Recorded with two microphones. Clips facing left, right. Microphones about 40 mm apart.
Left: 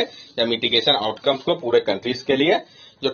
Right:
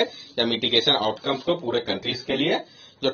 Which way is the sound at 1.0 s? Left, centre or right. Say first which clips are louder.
Left 3 dB; left.